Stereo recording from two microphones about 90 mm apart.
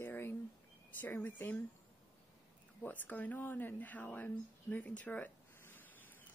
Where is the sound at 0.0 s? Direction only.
25° left (ahead or behind).